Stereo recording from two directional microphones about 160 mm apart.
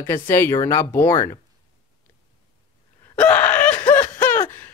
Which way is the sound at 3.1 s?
10° left (ahead or behind).